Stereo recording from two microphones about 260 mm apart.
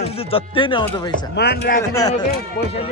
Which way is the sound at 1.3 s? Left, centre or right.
Left.